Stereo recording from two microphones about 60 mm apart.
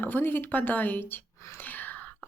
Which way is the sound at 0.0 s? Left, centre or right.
Left.